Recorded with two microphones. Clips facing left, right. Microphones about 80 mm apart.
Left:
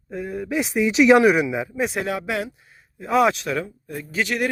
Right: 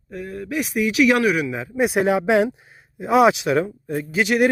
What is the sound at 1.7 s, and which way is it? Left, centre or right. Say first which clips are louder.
Speech: right 4 dB; centre.